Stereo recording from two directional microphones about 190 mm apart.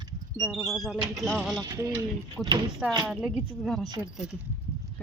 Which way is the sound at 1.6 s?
20° right (ahead or behind).